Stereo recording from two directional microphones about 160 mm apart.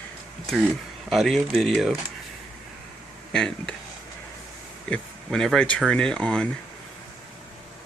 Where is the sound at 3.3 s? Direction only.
5° left (ahead or behind).